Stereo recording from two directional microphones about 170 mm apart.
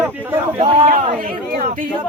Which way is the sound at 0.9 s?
45° right (ahead or behind).